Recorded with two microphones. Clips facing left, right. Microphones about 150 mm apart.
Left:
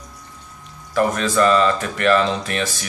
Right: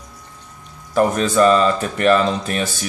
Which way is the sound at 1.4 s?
35° right (ahead or behind).